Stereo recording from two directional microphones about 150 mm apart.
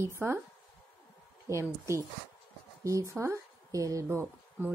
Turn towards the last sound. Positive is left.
turn(degrees=-20)  # may be behind; listen again after turning